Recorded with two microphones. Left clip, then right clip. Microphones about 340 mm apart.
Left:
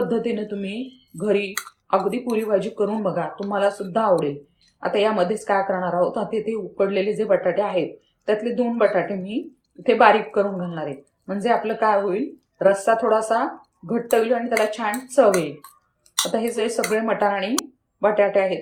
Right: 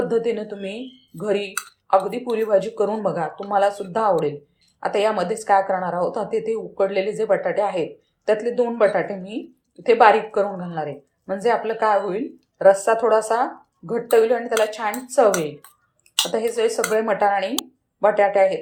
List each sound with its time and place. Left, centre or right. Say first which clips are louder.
0.1 s a woman's voice: right 2 dB; centre
16.3 s a woman's voice: right 2 dB; centre